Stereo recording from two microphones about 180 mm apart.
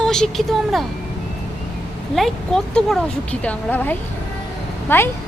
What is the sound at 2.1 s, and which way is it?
A woman's voice, centre (ahead or behind).